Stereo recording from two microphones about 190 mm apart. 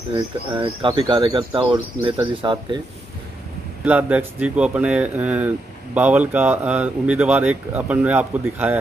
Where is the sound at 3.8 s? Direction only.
10° right (ahead or behind).